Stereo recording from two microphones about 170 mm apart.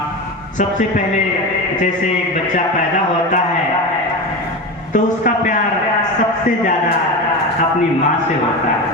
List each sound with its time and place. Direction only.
4.9 s a man's voice: 50° left (ahead or behind)